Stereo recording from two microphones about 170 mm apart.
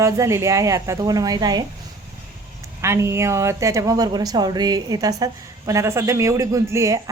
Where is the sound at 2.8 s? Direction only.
15° right (ahead or behind).